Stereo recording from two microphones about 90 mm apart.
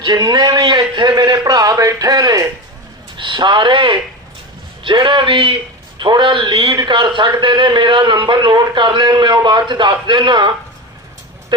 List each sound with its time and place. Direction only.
0.0 s a man's voice: 50° right (ahead or behind)
1.0 s a sound: 50° right (ahead or behind)
3.2 s speech: 60° right (ahead or behind)
6.0 s speech: 60° right (ahead or behind)
6.7 s a man's voice: 55° right (ahead or behind)